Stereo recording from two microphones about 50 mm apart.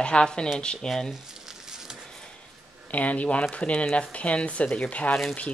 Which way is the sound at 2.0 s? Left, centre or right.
Centre.